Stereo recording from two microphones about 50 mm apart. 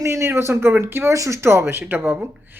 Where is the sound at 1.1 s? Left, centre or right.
Right.